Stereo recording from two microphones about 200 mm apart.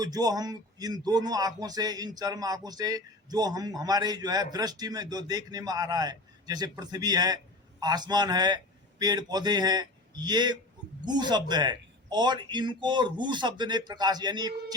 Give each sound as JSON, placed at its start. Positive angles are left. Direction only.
{"t": 0.0, "sound": "a man's voice", "side_deg": -20}